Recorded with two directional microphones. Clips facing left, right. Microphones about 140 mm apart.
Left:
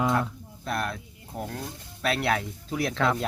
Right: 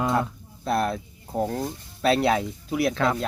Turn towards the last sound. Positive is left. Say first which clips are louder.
# right 3 dB
turn(degrees=-5)  # may be behind; listen again after turning